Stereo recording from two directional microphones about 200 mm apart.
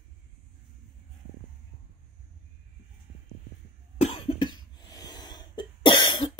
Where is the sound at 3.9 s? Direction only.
30° left (ahead or behind).